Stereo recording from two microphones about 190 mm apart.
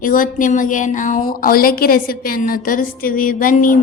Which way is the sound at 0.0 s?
45° left (ahead or behind).